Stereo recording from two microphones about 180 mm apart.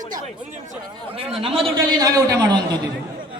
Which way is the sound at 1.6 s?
20° right (ahead or behind).